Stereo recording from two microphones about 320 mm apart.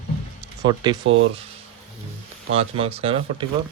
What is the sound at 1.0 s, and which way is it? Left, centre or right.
Speech, right.